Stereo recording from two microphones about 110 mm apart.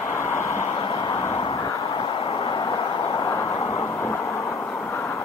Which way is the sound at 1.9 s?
50° left (ahead or behind).